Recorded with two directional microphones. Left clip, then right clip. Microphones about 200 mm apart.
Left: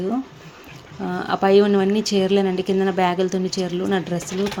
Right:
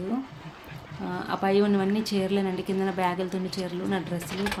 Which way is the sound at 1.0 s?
40° left (ahead or behind).